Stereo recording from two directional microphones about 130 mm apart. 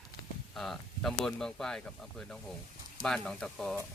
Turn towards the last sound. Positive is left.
turn(degrees=5)  # may be behind; listen again after turning